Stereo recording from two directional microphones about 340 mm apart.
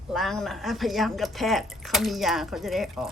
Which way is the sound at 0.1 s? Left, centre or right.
Centre.